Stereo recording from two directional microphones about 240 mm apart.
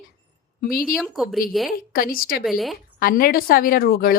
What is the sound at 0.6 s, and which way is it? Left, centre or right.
Speech, left.